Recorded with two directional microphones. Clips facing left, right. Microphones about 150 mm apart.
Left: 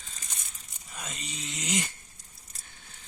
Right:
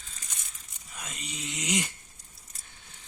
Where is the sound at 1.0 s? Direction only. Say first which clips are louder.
Even; 10° right (ahead or behind).